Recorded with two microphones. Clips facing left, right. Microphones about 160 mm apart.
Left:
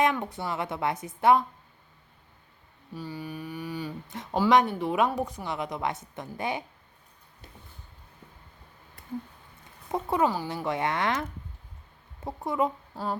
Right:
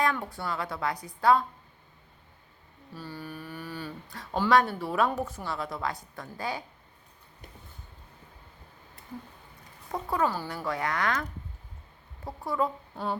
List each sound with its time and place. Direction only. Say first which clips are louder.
0.0 s a woman's voice: left 3 dB; 20° left (ahead or behind)
2.9 s a woman's voice: left 3 dB; 15° left (ahead or behind)
9.9 s a woman's voice: left 3 dB; 20° left (ahead or behind)